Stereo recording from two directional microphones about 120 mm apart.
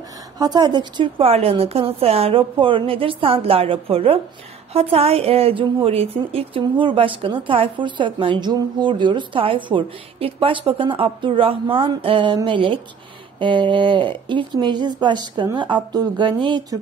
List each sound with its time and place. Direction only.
0.4 s a woman's voice: 35° right (ahead or behind)